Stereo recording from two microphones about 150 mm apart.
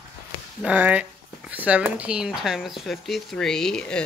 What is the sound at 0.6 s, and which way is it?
Speech, 10° right (ahead or behind).